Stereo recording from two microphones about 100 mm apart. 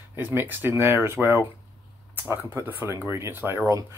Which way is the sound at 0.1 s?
20° right (ahead or behind).